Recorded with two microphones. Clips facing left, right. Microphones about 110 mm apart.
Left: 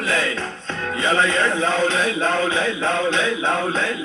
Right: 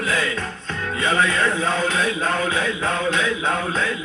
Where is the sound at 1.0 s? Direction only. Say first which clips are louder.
Left 1 dB; 30° left (ahead or behind).